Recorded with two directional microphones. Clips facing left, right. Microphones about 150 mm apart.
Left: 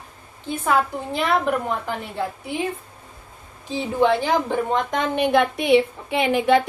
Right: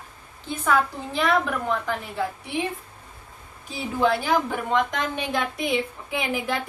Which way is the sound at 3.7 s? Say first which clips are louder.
Left 4 dB; 20° left (ahead or behind).